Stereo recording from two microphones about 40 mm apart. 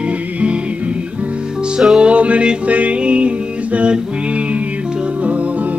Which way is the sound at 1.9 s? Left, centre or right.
Right.